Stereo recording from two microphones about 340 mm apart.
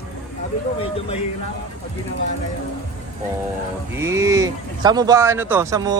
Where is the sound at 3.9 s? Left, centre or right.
Centre.